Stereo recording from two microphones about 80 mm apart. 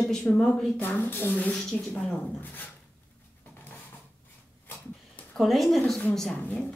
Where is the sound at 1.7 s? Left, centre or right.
Centre.